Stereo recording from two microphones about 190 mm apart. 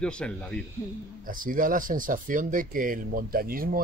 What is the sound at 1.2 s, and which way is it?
Speech, 45° right (ahead or behind).